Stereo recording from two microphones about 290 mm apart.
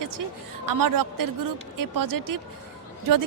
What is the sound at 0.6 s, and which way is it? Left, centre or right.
A woman's voice, right.